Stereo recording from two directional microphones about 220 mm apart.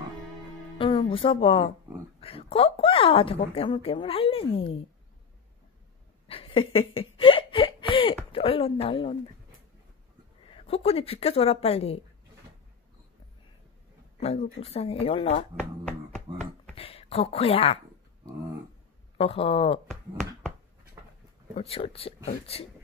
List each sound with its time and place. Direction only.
0.7 s speech: 20° left (ahead or behind)
6.2 s a sound: 25° left (ahead or behind)
8.3 s speech: 25° left (ahead or behind)
10.5 s speech: 25° left (ahead or behind)
14.6 s speech: 25° left (ahead or behind)
16.3 s a sound: 20° right (ahead or behind)
16.7 s speech: 25° left (ahead or behind)
19.1 s speech: 25° left (ahead or behind)
19.9 s finger snapping: centre (ahead or behind)
21.5 s speech: 25° left (ahead or behind)